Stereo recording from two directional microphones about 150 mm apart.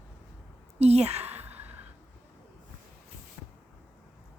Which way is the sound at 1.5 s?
10° right (ahead or behind).